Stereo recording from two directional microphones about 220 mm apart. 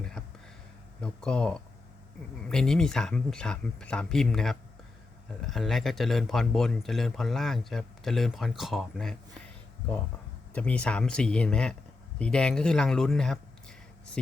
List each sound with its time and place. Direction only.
1.0 s speech: 5° left (ahead or behind)
10.5 s speech: 5° left (ahead or behind)